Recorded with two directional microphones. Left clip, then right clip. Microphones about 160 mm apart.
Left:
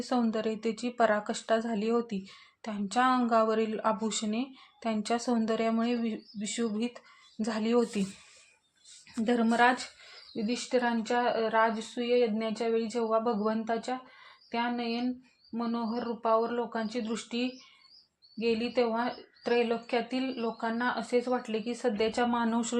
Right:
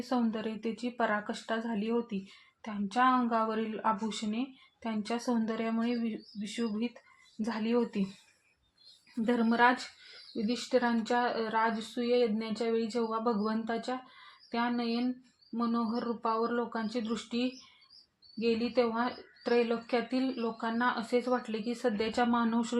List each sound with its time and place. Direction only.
0.0 s a woman's voice: 25° left (ahead or behind)
9.2 s a woman's voice: 20° left (ahead or behind)